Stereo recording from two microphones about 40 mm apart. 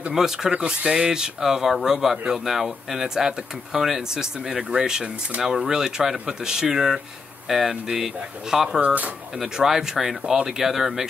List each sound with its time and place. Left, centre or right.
0.1 s speech: centre
8.8 s speech: right
9.6 s speech: centre